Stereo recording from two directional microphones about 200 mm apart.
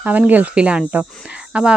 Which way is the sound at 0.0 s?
10° right (ahead or behind).